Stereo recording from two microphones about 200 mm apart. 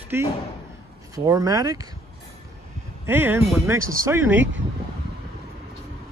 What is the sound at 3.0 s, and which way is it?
Speech, 10° right (ahead or behind).